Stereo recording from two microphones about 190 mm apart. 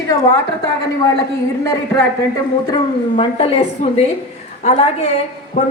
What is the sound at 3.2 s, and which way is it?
Speech, 30° left (ahead or behind).